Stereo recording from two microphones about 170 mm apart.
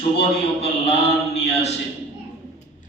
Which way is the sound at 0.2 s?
35° left (ahead or behind).